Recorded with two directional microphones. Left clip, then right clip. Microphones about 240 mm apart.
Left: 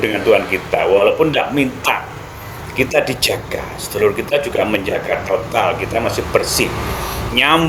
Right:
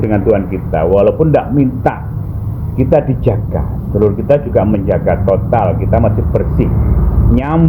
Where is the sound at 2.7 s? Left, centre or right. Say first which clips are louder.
Right 3 dB; centre.